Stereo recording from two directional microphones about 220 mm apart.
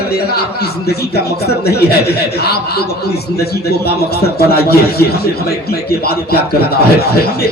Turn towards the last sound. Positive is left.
turn(degrees=45)  # may be behind; listen again after turning